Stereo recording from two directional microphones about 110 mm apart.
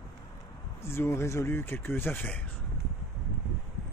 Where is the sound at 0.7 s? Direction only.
25° left (ahead or behind).